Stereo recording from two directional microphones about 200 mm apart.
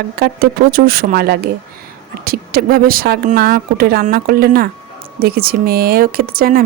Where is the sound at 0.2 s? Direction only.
50° right (ahead or behind).